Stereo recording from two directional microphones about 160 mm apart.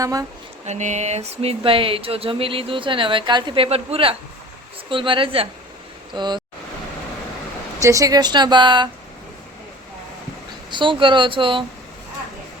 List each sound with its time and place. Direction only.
0.0 s speech: 20° right (ahead or behind)
0.6 s speech: 45° right (ahead or behind); by 6.4 s 25° right (ahead or behind)
7.8 s speech: 20° right (ahead or behind)
10.7 s speech: 30° right (ahead or behind)